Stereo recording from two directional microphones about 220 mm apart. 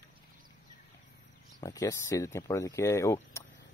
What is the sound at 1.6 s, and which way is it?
Speech, 15° left (ahead or behind).